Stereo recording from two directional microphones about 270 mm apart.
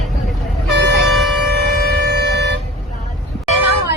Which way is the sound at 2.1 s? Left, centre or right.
Right.